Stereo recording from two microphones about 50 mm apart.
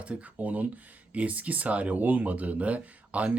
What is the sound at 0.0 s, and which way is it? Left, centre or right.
Speech, right.